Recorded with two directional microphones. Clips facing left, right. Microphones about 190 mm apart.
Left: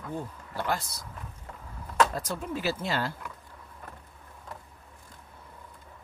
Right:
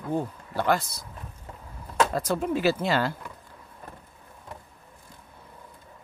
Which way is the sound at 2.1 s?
75° right (ahead or behind).